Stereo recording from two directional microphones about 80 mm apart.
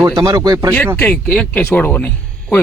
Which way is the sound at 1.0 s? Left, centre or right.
Centre.